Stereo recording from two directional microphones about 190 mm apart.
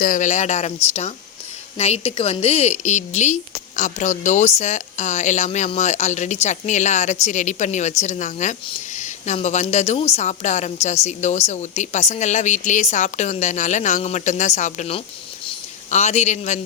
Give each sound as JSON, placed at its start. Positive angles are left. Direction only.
{"t": 0.0, "sound": "a woman's voice", "side_deg": 40}